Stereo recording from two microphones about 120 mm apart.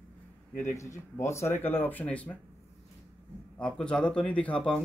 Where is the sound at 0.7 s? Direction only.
25° left (ahead or behind).